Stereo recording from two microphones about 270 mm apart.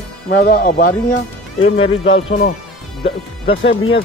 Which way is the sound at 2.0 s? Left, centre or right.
Left.